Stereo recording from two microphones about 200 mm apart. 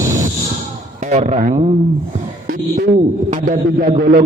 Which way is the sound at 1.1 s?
35° right (ahead or behind).